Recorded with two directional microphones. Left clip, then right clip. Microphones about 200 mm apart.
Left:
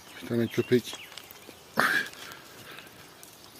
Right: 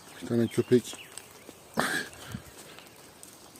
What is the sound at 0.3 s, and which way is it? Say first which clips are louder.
Speech: right 1 dB; 20° right (ahead or behind).